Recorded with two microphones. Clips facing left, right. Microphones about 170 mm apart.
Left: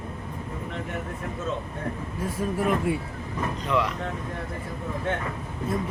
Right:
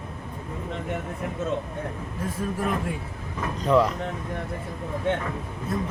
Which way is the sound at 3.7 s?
40° right (ahead or behind).